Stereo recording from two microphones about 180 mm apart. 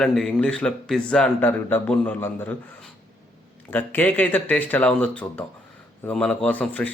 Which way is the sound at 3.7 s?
10° left (ahead or behind).